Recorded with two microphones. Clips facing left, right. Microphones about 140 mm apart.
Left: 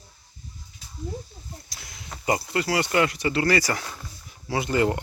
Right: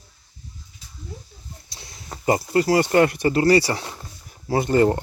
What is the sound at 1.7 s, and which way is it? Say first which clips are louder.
Speech: right 6 dB; 30° right (ahead or behind).